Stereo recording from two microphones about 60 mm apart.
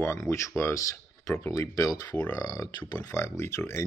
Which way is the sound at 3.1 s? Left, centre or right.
Left.